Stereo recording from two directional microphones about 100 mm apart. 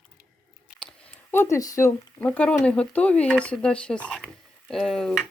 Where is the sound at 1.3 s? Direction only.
25° left (ahead or behind).